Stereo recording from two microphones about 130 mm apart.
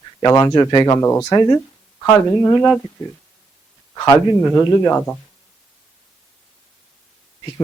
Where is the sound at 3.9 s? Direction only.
25° left (ahead or behind).